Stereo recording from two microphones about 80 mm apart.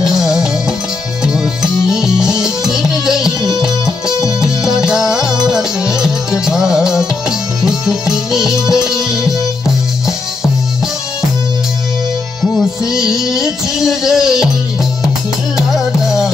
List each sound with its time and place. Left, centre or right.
0.0 s music: centre
3.3 s music: left
4.4 s music: centre
13.2 s music: centre
15.5 s music: centre